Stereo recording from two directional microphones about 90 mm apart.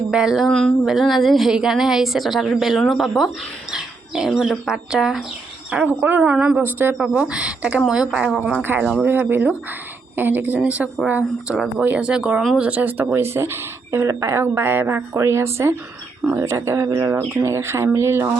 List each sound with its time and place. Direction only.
0.1 s a woman's voice: 5° right (ahead or behind)
3.7 s bird: 5° right (ahead or behind)
4.3 s a woman's voice: 5° right (ahead or behind)
5.7 s speech: 20° right (ahead or behind)
9.0 s speech: 20° right (ahead or behind)